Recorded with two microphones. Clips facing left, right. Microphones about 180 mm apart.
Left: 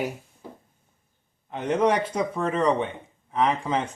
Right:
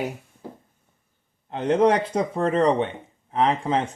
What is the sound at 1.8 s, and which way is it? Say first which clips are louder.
Speech: right 2 dB; 25° right (ahead or behind).